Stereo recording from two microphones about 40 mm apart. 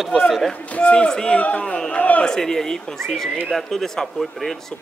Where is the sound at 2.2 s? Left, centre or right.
Centre.